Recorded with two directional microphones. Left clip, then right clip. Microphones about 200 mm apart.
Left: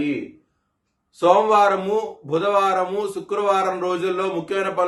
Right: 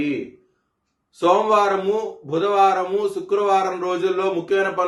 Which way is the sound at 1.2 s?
15° left (ahead or behind).